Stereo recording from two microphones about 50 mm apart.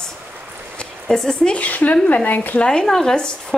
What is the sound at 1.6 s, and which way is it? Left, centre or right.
Speech, left.